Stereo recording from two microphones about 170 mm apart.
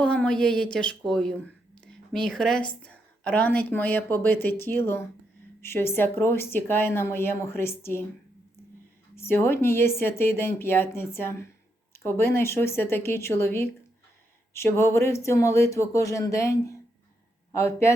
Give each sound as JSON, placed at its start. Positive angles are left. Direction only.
{"t": 0.0, "sound": "speech", "side_deg": 5}
{"t": 9.1, "sound": "speech", "side_deg": 15}